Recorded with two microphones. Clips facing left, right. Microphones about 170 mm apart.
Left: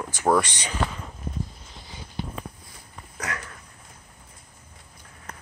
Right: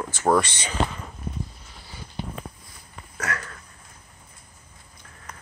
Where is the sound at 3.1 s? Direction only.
15° left (ahead or behind).